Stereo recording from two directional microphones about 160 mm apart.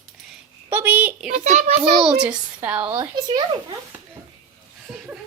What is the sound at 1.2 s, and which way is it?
Speech, 45° right (ahead or behind).